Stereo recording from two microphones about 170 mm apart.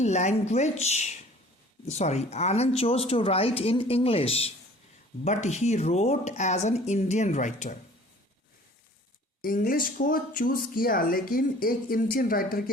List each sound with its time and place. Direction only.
0.0 s speech: 40° left (ahead or behind)
9.4 s speech: 55° left (ahead or behind)